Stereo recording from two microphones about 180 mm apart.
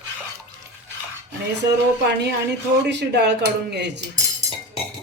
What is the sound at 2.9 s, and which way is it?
Speech, 75° right (ahead or behind).